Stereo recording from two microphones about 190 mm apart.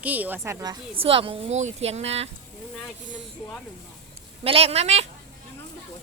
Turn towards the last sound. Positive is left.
turn(degrees=-35)  # may be behind; listen again after turning